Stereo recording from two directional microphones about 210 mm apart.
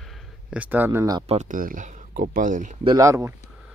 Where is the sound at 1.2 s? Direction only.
35° right (ahead or behind).